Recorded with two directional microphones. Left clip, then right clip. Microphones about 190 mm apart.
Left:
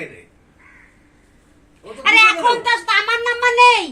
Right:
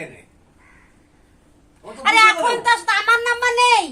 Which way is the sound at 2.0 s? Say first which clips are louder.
Left 2 dB; 25° right (ahead or behind).